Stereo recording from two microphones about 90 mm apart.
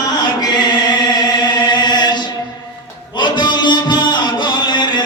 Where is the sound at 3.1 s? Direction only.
55° left (ahead or behind).